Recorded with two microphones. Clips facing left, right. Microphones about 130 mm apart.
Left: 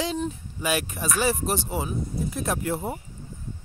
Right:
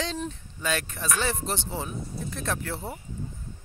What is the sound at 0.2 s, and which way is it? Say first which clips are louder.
Speech: left 4 dB; 10° left (ahead or behind).